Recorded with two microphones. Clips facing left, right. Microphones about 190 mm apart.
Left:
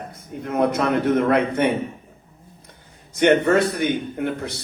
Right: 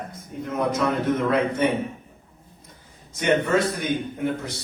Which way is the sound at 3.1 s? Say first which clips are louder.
Left 5 dB; 65° left (ahead or behind).